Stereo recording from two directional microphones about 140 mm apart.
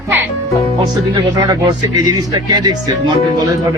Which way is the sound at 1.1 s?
30° right (ahead or behind).